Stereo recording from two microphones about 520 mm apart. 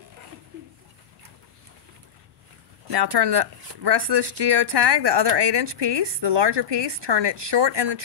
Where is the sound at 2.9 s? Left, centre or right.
Right.